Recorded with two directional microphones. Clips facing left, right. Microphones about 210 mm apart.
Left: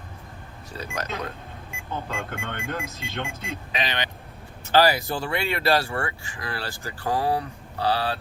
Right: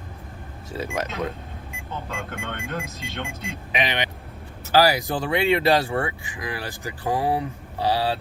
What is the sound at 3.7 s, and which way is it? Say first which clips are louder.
Speech: right 4 dB; 20° right (ahead or behind).